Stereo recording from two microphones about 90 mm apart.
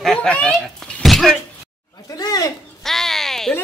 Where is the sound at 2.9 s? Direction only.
5° left (ahead or behind).